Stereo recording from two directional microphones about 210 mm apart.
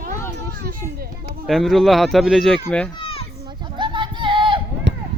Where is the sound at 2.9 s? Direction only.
25° left (ahead or behind).